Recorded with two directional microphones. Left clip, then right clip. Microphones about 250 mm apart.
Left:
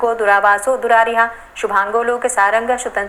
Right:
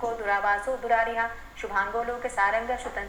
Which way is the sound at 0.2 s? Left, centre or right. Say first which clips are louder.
Left 12 dB; left.